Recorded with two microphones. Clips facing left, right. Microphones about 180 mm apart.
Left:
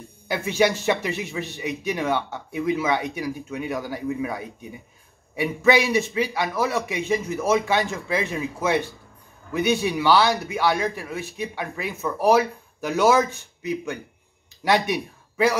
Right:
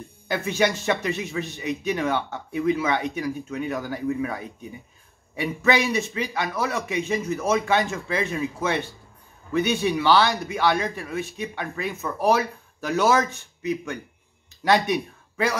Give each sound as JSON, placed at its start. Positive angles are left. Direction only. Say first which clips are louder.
{"t": 0.3, "sound": "a man's voice", "louder": "left 2 dB", "side_deg": 10}
{"t": 14.6, "sound": "speech", "louder": "right 1 dB", "side_deg": 10}